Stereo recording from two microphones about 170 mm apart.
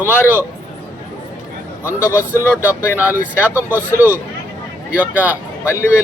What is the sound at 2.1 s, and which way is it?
Speech, 15° left (ahead or behind).